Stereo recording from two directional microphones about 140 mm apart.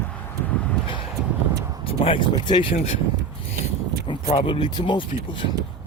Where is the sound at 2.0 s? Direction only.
35° left (ahead or behind).